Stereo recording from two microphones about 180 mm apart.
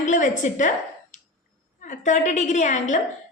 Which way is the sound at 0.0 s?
45° left (ahead or behind).